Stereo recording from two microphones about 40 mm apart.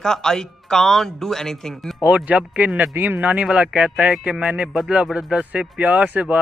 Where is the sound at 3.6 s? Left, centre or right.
Right.